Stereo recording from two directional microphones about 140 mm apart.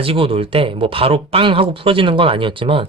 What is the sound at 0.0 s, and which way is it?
Speech, 40° right (ahead or behind).